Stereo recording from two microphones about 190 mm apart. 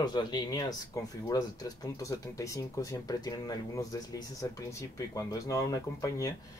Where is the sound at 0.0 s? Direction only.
20° left (ahead or behind).